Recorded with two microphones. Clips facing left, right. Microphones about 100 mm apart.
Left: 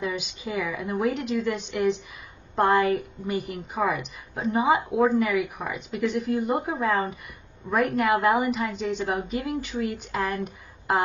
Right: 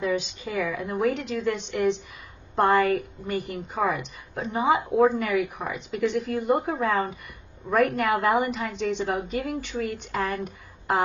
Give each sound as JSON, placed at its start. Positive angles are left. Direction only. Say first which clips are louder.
{"t": 0.0, "sound": "a woman's voice", "louder": "right 3 dB", "side_deg": 5}